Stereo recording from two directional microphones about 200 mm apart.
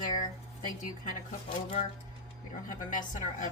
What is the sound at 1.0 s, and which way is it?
A woman's voice, 35° left (ahead or behind).